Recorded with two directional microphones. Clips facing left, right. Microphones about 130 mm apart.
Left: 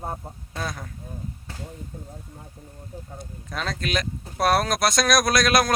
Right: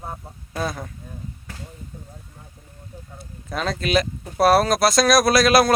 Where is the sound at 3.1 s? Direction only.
Centre (ahead or behind).